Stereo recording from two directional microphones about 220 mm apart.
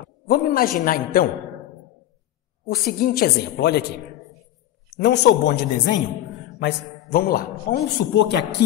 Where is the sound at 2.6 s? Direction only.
40° left (ahead or behind).